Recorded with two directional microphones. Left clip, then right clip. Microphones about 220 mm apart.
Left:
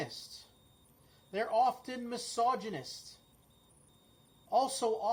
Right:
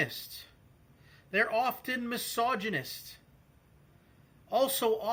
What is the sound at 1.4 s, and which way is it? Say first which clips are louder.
Speech: even; 30° right (ahead or behind).